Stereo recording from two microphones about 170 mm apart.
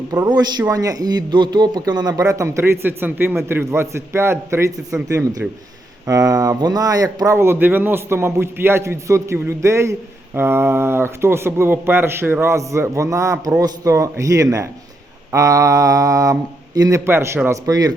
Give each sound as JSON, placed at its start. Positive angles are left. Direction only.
{"t": 0.1, "sound": "speech", "side_deg": -20}